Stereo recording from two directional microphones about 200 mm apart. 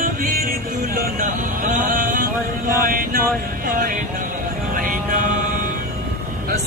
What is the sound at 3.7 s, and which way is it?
Music, 45° right (ahead or behind).